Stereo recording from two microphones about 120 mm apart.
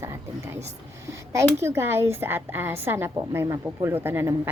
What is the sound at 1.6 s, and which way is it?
A woman's voice, 20° right (ahead or behind).